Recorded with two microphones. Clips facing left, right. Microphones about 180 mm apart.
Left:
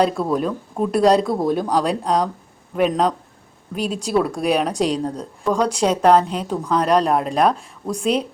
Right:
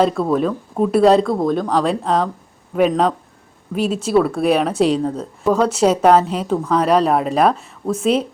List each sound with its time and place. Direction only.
0.0 s speech: centre (ahead or behind)